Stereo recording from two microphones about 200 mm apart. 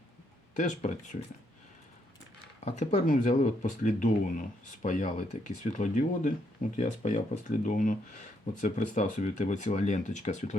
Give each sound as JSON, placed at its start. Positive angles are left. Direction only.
{"t": 0.5, "sound": "speech", "side_deg": 35}
{"t": 2.6, "sound": "speech", "side_deg": 35}